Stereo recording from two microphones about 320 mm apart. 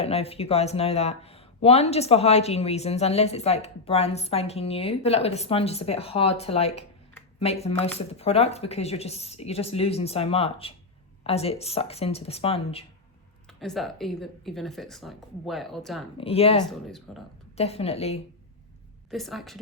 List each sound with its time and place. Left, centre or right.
0.0 s speech: centre
13.6 s a woman's voice: centre
16.1 s speech: centre
16.6 s a woman's voice: centre
17.6 s speech: centre
19.1 s a woman's voice: centre